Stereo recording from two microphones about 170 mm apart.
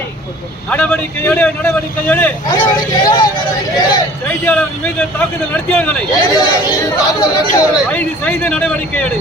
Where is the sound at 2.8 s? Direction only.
25° left (ahead or behind).